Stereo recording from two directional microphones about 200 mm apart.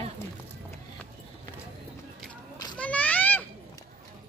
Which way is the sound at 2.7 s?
5° left (ahead or behind).